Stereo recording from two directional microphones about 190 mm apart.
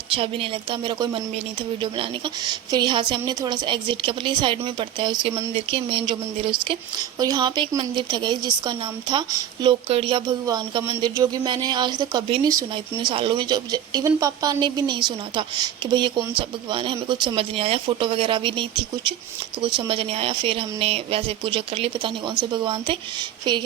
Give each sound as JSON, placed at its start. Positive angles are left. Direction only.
{"t": 0.1, "sound": "a woman's voice", "side_deg": -30}